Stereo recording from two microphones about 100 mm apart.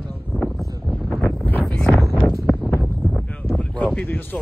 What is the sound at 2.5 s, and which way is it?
Wind noise, 20° left (ahead or behind).